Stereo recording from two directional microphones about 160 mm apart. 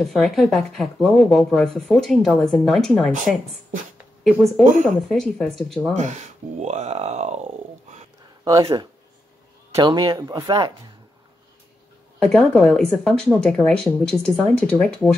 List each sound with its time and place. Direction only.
0.0 s speech: centre (ahead or behind)
4.2 s speech: centre (ahead or behind)
6.6 s speech: 45° right (ahead or behind)
8.5 s speech: 20° right (ahead or behind)
12.2 s speech: 5° left (ahead or behind)